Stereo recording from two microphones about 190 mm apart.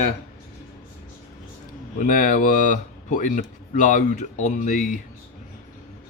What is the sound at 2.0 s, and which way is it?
Speech, 45° left (ahead or behind).